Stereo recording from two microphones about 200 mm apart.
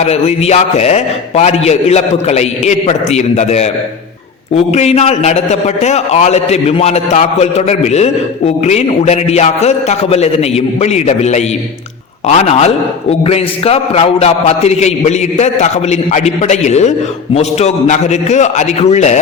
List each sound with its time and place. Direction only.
0.0 s a man's voice: 30° left (ahead or behind)